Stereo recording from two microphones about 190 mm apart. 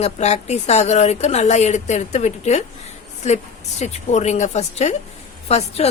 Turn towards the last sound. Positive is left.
turn(degrees=35)  # may be behind; listen again after turning